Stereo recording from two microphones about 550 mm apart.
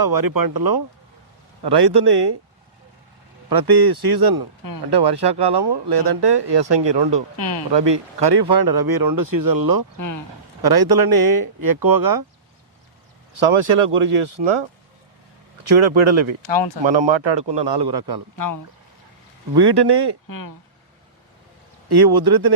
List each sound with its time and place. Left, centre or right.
0.0 s speech: right
3.5 s speech: right
7.3 s speech: left
7.7 s speech: right
13.3 s speech: right
16.0 s speech: right
16.5 s speech: left
16.8 s speech: right
18.3 s speech: left
19.5 s speech: right
20.2 s speech: left
21.8 s speech: right